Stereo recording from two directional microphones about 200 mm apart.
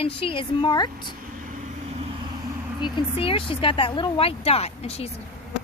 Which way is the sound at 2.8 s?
25° left (ahead or behind).